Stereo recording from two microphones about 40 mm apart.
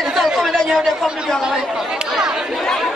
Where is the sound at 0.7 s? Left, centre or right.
Centre.